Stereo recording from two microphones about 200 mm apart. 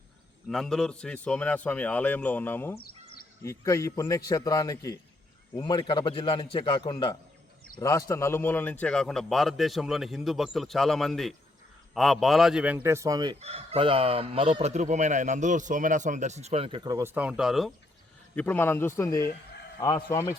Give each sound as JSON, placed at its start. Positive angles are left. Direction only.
{"t": 0.4, "sound": "a man's voice", "side_deg": 0}
{"t": 2.7, "sound": "a sound", "side_deg": 50}
{"t": 3.4, "sound": "a man's voice", "side_deg": 15}
{"t": 13.4, "sound": "speech", "side_deg": -30}
{"t": 18.3, "sound": "a man's voice", "side_deg": 10}